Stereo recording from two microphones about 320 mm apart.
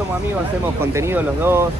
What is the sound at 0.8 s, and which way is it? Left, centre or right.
Speech, centre.